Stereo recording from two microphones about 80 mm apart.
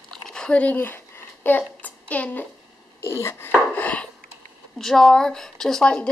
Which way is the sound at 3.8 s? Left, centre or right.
Centre.